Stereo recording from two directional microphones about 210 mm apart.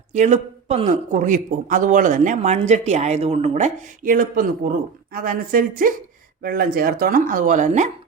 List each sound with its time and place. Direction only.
0.1 s speech: 35° right (ahead or behind)